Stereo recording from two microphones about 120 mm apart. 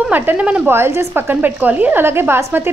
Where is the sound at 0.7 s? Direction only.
20° right (ahead or behind).